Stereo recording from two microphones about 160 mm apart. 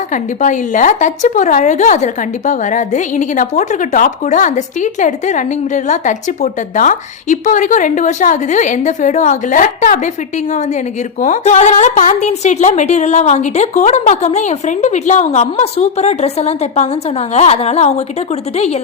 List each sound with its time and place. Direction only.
0.1 s a woman's voice: 50° left (ahead or behind)
11.2 s a woman's voice: 50° left (ahead or behind)